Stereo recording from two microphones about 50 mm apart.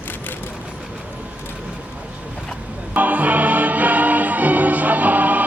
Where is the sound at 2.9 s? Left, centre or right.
Right.